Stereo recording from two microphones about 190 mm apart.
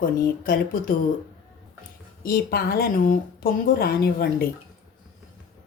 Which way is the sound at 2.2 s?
50° left (ahead or behind).